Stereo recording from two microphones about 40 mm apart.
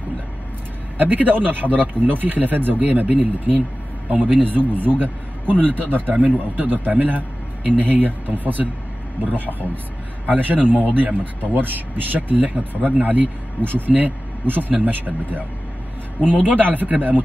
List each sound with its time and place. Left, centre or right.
0.9 s a man's voice: right
16.3 s a man's voice: right